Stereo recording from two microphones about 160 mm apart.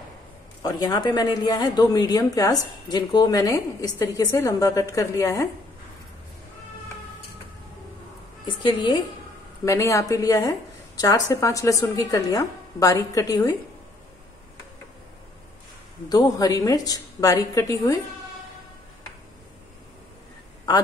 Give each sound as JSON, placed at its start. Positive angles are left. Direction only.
{"t": 0.6, "sound": "speech", "side_deg": 25}
{"t": 8.5, "sound": "speech", "side_deg": 30}
{"t": 16.1, "sound": "speech", "side_deg": 20}